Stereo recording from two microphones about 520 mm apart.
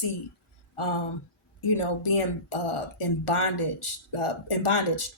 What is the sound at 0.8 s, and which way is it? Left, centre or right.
Speech, left.